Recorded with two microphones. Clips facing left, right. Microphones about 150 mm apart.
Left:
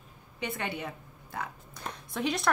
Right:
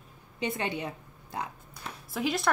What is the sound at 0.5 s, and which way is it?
Speech, 20° right (ahead or behind).